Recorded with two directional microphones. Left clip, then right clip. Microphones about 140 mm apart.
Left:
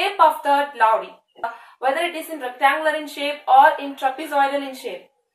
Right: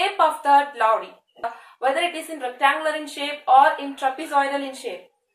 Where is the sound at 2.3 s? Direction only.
15° right (ahead or behind).